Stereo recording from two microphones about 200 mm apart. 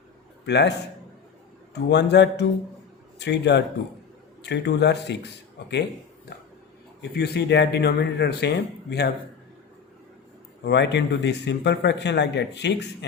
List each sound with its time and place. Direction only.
0.4 s a man's voice: 60° left (ahead or behind)
1.7 s a man's voice: 60° left (ahead or behind)
7.0 s a man's voice: 55° left (ahead or behind)
10.6 s a man's voice: 60° left (ahead or behind)